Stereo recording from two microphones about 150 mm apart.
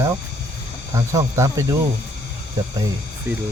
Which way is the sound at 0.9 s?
20° right (ahead or behind).